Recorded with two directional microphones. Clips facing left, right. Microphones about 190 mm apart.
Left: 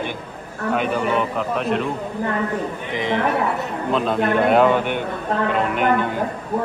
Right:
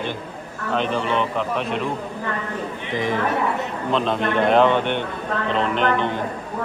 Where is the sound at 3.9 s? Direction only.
5° left (ahead or behind).